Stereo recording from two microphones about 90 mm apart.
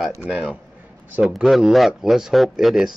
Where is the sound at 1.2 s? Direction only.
Centre (ahead or behind).